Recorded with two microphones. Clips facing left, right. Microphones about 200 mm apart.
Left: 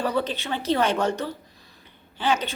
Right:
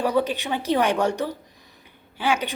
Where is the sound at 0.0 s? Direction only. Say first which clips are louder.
Right 3 dB; 15° right (ahead or behind).